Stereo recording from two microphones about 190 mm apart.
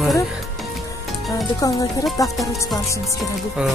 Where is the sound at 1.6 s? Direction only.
20° left (ahead or behind).